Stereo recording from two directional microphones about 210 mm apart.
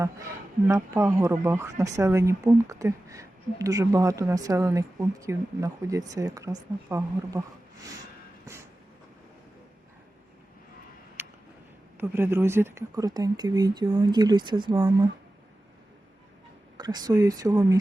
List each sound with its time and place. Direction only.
0.7 s speech: 15° right (ahead or behind)
11.2 s a sound: 10° right (ahead or behind)
11.9 s speech: 10° right (ahead or behind)
16.7 s speech: 20° right (ahead or behind)